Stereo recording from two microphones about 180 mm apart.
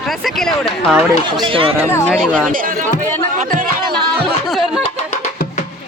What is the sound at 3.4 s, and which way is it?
Music, 50° right (ahead or behind).